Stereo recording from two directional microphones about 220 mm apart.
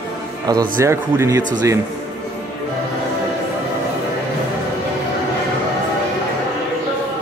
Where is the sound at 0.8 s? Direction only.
10° right (ahead or behind).